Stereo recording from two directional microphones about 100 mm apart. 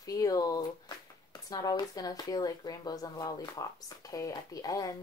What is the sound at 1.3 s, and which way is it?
Speech, 40° left (ahead or behind).